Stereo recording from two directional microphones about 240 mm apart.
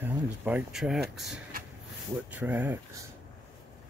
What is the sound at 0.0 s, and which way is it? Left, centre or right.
Speech, centre.